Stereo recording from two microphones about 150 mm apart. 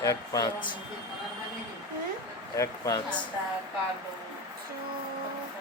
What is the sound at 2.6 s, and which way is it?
Speech, 25° left (ahead or behind).